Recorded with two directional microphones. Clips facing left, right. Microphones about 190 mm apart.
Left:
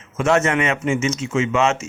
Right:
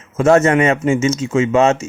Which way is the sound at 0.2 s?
35° right (ahead or behind).